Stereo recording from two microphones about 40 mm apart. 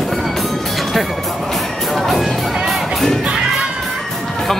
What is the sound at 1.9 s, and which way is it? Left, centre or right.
Music, centre.